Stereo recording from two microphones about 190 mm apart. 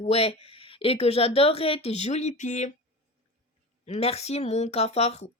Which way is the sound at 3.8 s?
35° left (ahead or behind).